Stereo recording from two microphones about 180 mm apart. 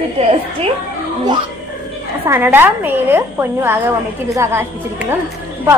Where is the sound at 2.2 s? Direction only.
10° right (ahead or behind).